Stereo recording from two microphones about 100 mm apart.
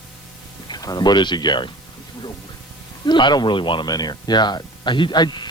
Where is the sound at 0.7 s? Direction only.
40° left (ahead or behind).